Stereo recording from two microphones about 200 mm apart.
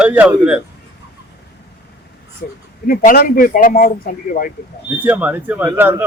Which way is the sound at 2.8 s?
45° left (ahead or behind).